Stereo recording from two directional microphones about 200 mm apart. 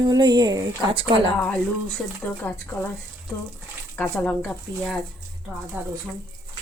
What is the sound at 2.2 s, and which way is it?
Speech, 10° left (ahead or behind).